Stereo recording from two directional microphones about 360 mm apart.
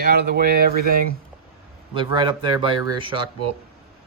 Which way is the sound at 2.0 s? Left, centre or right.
Centre.